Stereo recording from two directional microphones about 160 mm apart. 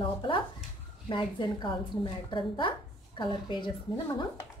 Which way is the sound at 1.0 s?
30° left (ahead or behind).